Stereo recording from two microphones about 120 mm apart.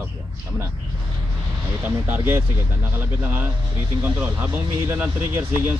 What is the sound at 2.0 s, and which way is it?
Speech, 20° right (ahead or behind).